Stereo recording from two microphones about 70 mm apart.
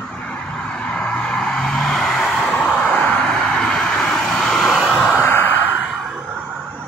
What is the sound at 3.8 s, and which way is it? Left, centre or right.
Vehicle, centre.